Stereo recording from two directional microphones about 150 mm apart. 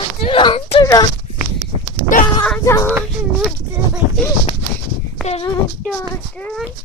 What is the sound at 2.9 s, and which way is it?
Speech, 5° right (ahead or behind).